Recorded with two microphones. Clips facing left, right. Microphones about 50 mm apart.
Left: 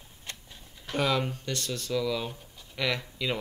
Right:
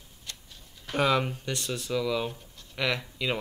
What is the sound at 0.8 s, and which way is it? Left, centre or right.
Speech, centre.